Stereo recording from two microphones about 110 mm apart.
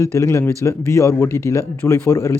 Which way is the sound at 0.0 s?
25° left (ahead or behind).